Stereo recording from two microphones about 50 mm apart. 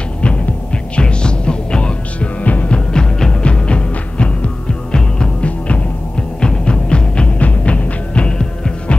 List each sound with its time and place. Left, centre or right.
0.9 s music: centre
2.9 s music: centre